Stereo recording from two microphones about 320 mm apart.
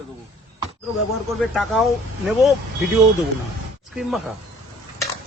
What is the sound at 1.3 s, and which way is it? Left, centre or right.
Speech, centre.